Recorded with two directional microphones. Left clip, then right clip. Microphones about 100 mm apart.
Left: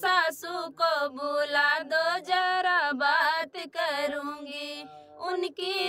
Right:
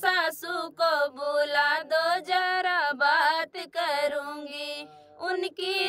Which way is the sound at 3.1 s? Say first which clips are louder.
Right 1 dB; 40° right (ahead or behind).